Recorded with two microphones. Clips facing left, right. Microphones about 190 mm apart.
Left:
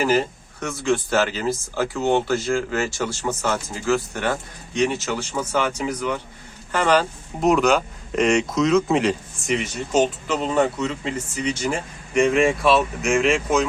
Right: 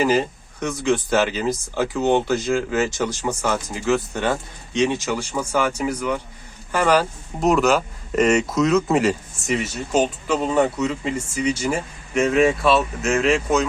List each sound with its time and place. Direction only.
0.0 s speech: 15° right (ahead or behind); by 13.7 s centre (ahead or behind)